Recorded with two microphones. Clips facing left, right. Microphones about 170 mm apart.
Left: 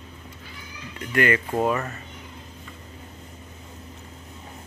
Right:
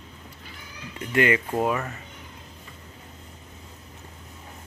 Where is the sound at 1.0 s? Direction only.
20° right (ahead or behind).